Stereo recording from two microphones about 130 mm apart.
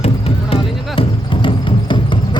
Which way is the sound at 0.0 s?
50° left (ahead or behind).